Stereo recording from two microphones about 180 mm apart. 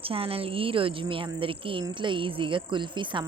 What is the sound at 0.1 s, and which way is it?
Speech, 30° right (ahead or behind).